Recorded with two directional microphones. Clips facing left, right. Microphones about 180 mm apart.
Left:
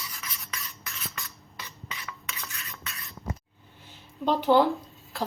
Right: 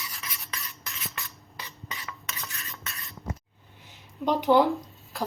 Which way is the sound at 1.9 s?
40° right (ahead or behind).